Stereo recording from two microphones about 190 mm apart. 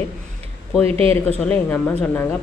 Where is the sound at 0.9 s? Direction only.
30° right (ahead or behind).